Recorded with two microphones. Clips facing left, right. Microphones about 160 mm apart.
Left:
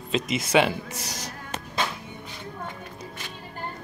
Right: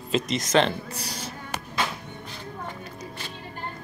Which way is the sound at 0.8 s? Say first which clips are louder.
Right 1 dB; 90° left.